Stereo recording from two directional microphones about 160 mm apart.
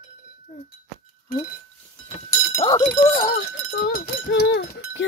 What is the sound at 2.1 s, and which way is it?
Chink, 35° left (ahead or behind).